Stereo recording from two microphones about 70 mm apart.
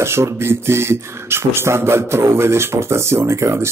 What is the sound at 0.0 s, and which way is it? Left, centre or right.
Speech, right.